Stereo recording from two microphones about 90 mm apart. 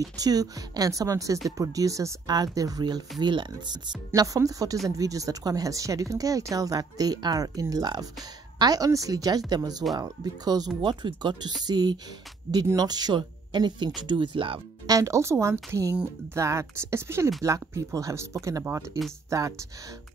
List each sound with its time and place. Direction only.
0.0 s speech: 45° right (ahead or behind)
4.1 s speech: 40° right (ahead or behind)
10.8 s speech: 60° right (ahead or behind)
14.9 s speech: 35° right (ahead or behind)